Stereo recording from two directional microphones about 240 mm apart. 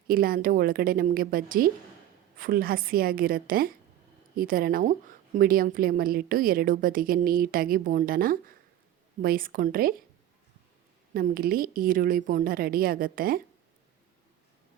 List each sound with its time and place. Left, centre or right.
0.1 s a woman's voice: right
11.1 s a woman's voice: right